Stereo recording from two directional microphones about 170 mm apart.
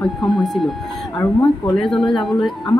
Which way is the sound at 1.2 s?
15° left (ahead or behind).